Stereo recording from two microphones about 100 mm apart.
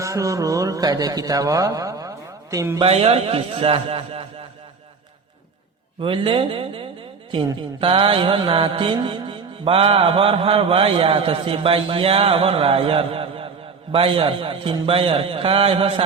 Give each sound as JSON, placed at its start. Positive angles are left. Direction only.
{"t": 0.0, "sound": "a man's voice", "side_deg": -30}
{"t": 2.8, "sound": "mantra", "side_deg": -85}
{"t": 6.0, "sound": "speech", "side_deg": -60}
{"t": 7.3, "sound": "mantra", "side_deg": -60}